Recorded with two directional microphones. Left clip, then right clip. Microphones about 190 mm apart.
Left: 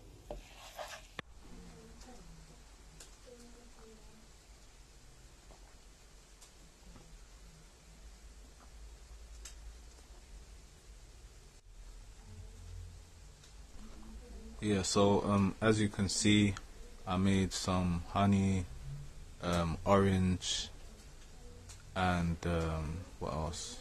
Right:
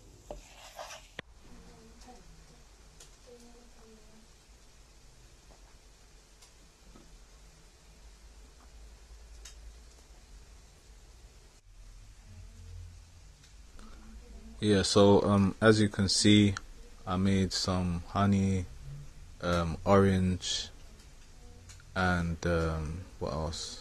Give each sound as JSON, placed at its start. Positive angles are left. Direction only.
{"t": 0.3, "sound": "rub", "side_deg": 0}
{"t": 14.6, "sound": "speech", "side_deg": -20}
{"t": 17.7, "sound": "speech", "side_deg": 0}
{"t": 18.1, "sound": "speech", "side_deg": -15}
{"t": 21.9, "sound": "speech", "side_deg": -15}